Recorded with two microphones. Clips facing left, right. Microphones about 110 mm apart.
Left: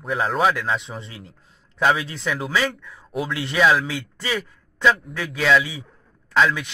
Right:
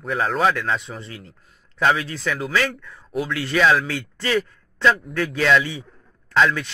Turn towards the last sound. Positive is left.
turn(degrees=0)  # may be behind; listen again after turning